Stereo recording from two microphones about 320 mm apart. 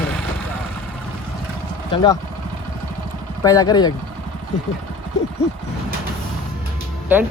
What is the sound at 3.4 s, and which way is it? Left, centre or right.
Speech, centre.